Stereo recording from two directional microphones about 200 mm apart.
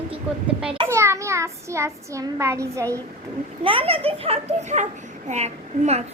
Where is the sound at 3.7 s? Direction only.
25° right (ahead or behind).